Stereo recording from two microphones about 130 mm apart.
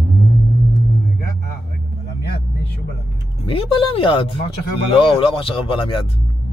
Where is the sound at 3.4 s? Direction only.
45° left (ahead or behind).